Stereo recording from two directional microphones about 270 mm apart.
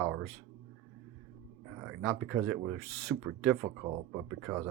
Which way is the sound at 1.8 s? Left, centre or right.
Centre.